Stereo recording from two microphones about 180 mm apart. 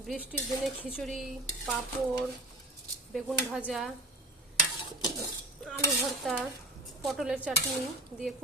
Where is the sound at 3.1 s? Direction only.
5° right (ahead or behind).